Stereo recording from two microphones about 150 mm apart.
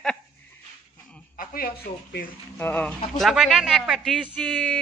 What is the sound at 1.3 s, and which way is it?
Speech, 75° left (ahead or behind).